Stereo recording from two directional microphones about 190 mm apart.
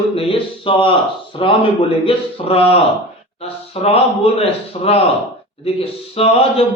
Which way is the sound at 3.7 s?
30° left (ahead or behind).